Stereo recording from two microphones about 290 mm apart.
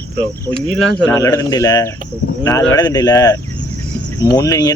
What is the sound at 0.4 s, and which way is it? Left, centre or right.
A man's voice, centre.